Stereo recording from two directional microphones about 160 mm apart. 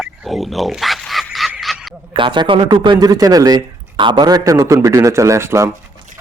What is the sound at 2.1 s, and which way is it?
Speech, 30° right (ahead or behind).